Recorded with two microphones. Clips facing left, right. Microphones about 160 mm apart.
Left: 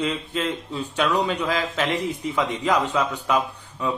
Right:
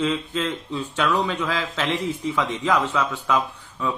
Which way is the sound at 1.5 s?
40° left (ahead or behind).